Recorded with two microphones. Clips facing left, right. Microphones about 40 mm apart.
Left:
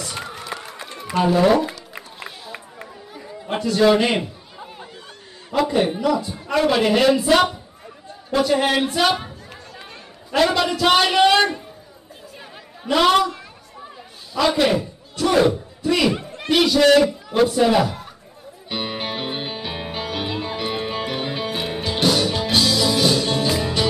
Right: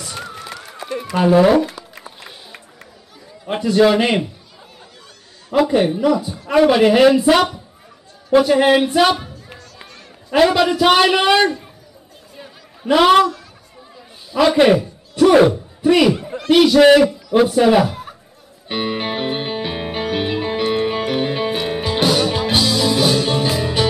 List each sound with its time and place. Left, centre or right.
0.0 s run: centre
1.1 s a man's voice: centre
2.2 s run: centre
3.4 s a man's voice: centre
5.6 s a man's voice: centre
10.4 s a man's voice: centre
12.8 s a man's voice: centre
14.3 s a man's voice: centre
16.4 s a man's voice: centre
16.7 s a man's voice: centre
18.7 s music: centre